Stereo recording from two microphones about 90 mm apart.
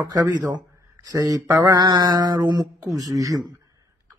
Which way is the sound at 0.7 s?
40° right (ahead or behind).